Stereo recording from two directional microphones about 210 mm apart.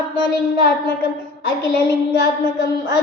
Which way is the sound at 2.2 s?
55° left (ahead or behind).